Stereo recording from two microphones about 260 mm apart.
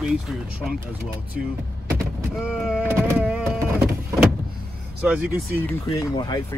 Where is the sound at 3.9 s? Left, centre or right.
Centre.